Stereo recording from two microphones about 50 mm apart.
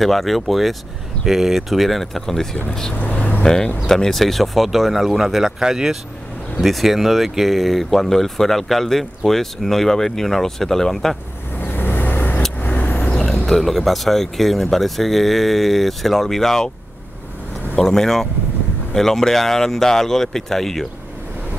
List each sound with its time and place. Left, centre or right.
0.0 s speech: centre
3.0 s vehicle: left
3.4 s speech: centre
6.5 s speech: centre
11.5 s vehicle: left
13.1 s vehicle: centre
13.5 s speech: centre
17.7 s speech: centre